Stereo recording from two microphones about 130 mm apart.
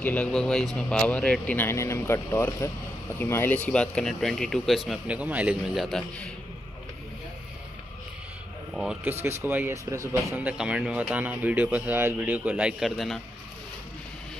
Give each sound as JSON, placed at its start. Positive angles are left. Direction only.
{"t": 0.0, "sound": "speech", "side_deg": 10}
{"t": 9.2, "sound": "speech", "side_deg": -15}
{"t": 10.4, "sound": "speech", "side_deg": -5}